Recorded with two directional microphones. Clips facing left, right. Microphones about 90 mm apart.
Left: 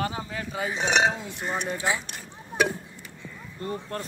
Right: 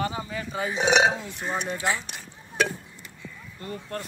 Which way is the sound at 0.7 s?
5° right (ahead or behind).